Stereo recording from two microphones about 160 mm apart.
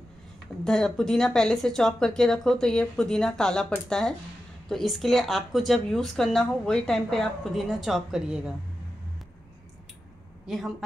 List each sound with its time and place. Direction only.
0.7 s speech: 5° left (ahead or behind)
4.6 s speech: centre (ahead or behind)
10.4 s a woman's voice: centre (ahead or behind)